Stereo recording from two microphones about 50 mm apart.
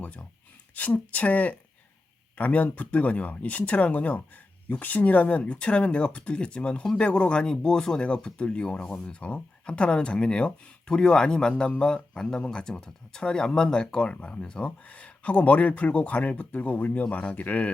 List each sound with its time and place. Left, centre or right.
0.0 s speech: left